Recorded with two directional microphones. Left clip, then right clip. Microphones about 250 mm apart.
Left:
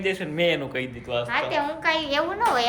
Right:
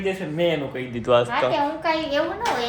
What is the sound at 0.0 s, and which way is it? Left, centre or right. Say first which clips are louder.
Speech: right 1 dB; centre.